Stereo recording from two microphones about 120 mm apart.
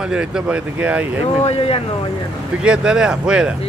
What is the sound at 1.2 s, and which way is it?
Speech, 60° left (ahead or behind).